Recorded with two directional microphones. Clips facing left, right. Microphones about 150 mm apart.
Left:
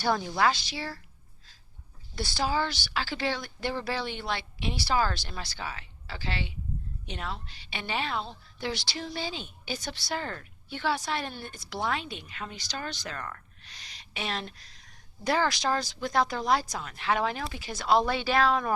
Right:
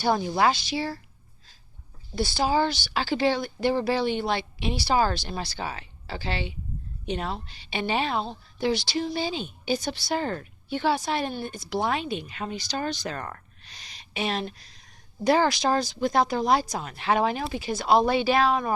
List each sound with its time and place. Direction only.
0.0 s a woman's voice: 20° right (ahead or behind)
2.1 s a woman's voice: 25° right (ahead or behind)
13.1 s speech: 30° right (ahead or behind)
14.0 s a woman's voice: 15° right (ahead or behind)